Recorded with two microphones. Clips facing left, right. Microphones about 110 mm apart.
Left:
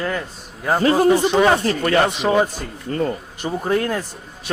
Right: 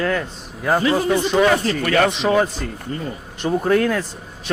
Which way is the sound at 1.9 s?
25° left (ahead or behind).